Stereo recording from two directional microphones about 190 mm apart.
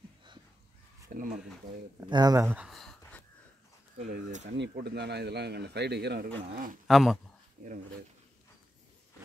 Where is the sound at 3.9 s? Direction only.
45° right (ahead or behind).